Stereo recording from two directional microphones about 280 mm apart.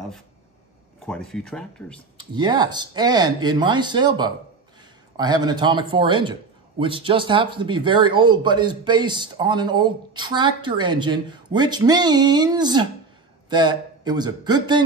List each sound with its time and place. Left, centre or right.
1.0 s speech: centre
2.3 s speech: centre